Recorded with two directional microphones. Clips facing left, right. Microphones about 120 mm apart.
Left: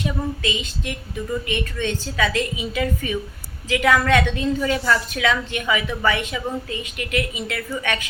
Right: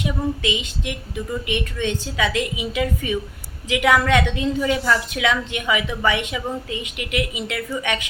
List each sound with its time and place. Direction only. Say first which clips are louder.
0.0 s a woman's voice: right 2 dB; 15° right (ahead or behind)